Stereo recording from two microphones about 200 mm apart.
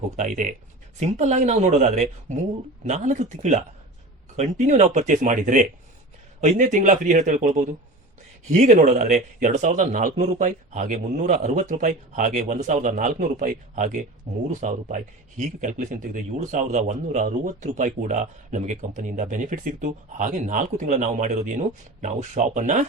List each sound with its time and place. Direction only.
0.2 s a man's voice: 40° right (ahead or behind)